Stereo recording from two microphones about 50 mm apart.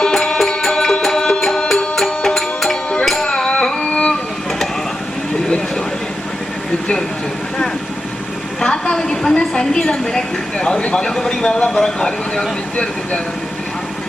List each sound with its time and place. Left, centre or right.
0.0 s music: centre
3.2 s music: centre
8.6 s a sound: centre
10.8 s speech: left
11.1 s speech: centre
12.7 s speech: left